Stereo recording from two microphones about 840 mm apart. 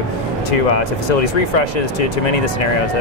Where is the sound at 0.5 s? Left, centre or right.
Left.